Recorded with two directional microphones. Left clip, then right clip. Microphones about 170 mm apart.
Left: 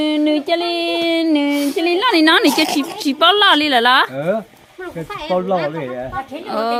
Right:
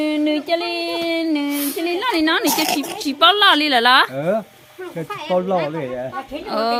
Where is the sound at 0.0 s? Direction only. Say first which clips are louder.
Left 3 dB; 55° left (ahead or behind); by 2.5 s 70° left (ahead or behind).